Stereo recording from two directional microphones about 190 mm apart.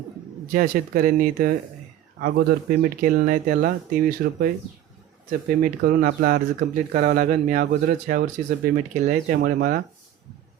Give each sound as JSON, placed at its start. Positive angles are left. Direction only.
{"t": 0.5, "sound": "speech", "side_deg": -45}
{"t": 5.5, "sound": "speech", "side_deg": -45}
{"t": 9.4, "sound": "speech", "side_deg": -55}